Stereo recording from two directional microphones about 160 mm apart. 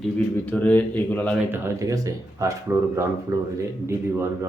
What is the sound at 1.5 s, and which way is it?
Speech, 15° right (ahead or behind).